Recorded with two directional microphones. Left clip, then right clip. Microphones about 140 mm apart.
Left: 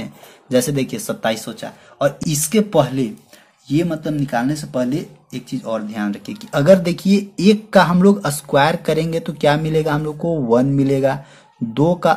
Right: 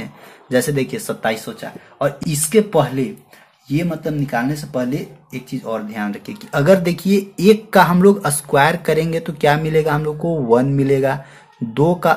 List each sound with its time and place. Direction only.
0.0 s speech: 35° left (ahead or behind)
3.6 s speech: 25° left (ahead or behind)